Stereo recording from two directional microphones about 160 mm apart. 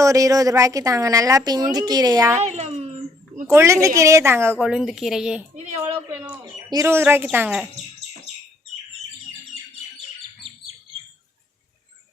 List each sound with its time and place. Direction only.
0.0 s a woman's voice: 20° right (ahead or behind)
2.4 s a sound: 45° right (ahead or behind)
3.4 s speech: 15° right (ahead or behind)
4.6 s speech: 5° right (ahead or behind)
6.4 s speech: 25° right (ahead or behind)